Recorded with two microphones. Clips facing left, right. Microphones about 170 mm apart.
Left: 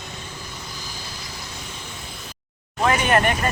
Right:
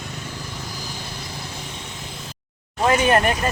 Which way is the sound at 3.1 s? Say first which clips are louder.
Right 1 dB; 30° right (ahead or behind).